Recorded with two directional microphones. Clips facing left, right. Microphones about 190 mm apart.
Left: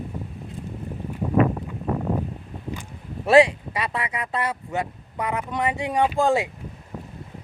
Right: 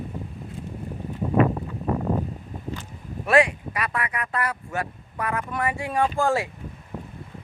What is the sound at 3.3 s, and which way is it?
Speech, 25° left (ahead or behind).